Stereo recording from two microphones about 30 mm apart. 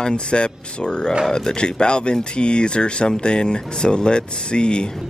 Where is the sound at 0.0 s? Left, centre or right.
Left.